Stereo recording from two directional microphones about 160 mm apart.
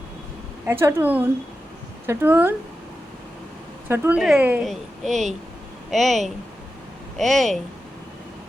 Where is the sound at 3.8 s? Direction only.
15° right (ahead or behind).